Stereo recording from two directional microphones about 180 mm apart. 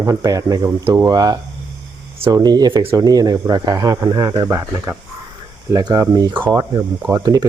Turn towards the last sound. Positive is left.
turn(degrees=-20)  # may be behind; listen again after turning